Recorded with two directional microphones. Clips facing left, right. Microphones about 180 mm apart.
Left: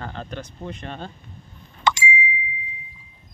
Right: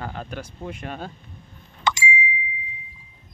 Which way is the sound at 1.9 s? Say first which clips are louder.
Left 3 dB; 60° left (ahead or behind).